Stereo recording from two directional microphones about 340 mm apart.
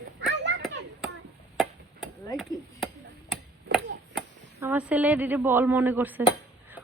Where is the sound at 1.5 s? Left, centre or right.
Centre.